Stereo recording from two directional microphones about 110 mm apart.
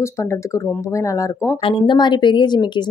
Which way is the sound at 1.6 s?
45° left (ahead or behind).